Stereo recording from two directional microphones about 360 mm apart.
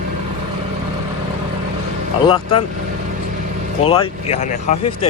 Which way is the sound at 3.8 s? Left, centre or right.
Centre.